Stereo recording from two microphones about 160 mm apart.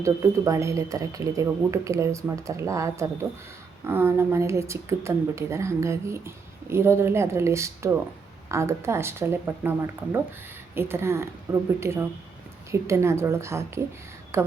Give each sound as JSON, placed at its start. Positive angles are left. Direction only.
{"t": 0.0, "sound": "speech", "side_deg": -20}